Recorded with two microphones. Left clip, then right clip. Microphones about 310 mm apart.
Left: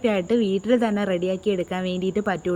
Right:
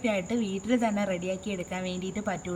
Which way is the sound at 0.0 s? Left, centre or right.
Centre.